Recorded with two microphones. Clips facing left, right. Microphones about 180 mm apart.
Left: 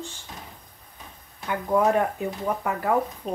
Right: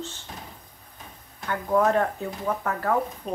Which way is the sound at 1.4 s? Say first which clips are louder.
Even; 10° left (ahead or behind).